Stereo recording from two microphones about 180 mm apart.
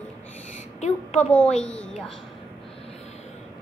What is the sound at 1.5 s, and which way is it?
Speech, 5° left (ahead or behind).